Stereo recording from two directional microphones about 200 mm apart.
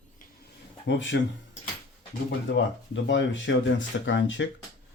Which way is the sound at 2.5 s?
65° left (ahead or behind).